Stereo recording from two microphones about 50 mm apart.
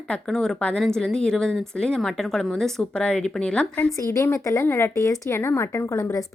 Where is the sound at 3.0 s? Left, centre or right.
Centre.